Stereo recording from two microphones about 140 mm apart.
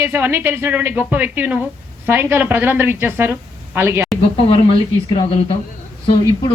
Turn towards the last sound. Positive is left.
turn(degrees=40)  # may be behind; listen again after turning